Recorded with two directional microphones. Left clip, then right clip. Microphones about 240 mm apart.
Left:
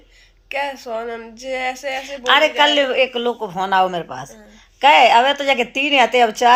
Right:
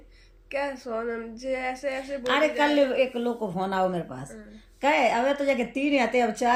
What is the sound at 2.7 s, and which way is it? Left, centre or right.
Speech, centre.